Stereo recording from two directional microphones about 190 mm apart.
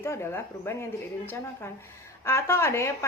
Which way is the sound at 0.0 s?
15° left (ahead or behind).